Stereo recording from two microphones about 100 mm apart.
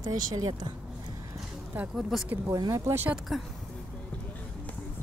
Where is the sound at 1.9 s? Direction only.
Centre (ahead or behind).